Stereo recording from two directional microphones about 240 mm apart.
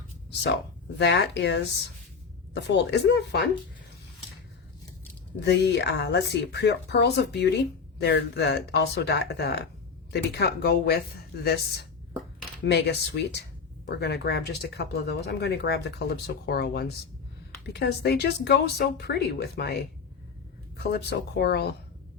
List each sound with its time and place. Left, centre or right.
0.9 s speech: left
5.4 s speech: left